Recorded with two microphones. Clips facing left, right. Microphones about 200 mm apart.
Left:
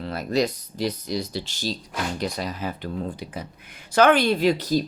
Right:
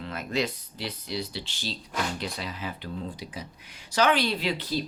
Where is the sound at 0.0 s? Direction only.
35° left (ahead or behind).